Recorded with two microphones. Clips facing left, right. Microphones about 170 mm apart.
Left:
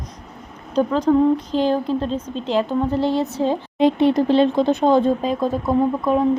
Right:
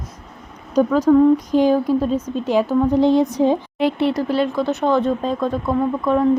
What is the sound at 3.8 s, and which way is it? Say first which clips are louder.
Speech: left 3 dB; 20° left (ahead or behind).